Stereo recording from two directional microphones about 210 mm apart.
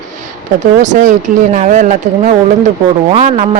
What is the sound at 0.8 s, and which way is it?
Speech, 35° right (ahead or behind).